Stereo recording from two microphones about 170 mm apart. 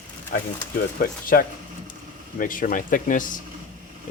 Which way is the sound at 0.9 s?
55° left (ahead or behind).